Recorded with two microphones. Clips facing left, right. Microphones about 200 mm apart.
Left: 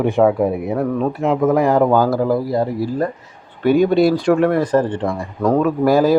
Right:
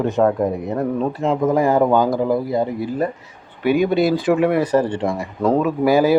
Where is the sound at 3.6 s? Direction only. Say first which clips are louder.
Left 3 dB; 40° left (ahead or behind).